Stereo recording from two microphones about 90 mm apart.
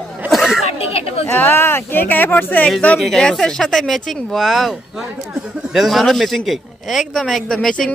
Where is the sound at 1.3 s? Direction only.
25° left (ahead or behind).